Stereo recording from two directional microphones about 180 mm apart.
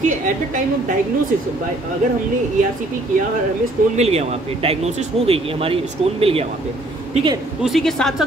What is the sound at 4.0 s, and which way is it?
Speech, 35° right (ahead or behind).